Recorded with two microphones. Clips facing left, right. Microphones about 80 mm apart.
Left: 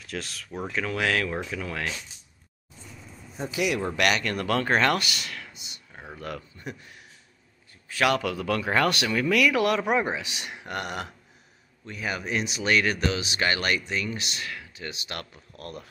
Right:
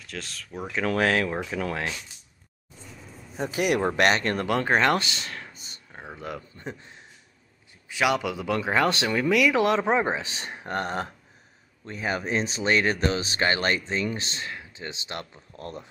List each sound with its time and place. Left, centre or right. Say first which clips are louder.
0.0 s speech: left 2 dB; centre
0.8 s speech: right 4 dB; right
3.3 s speech: right 3 dB; right
4.5 s speech: right 1 dB; centre; by 5.8 s right
5.9 s a sound: right 1 dB; right
6.6 s a man's voice: right 1 dB; right